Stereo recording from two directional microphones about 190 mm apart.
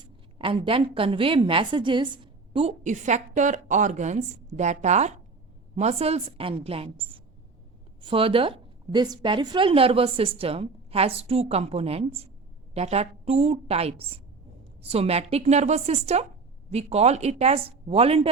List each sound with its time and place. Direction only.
0.3 s a woman's voice: 25° right (ahead or behind)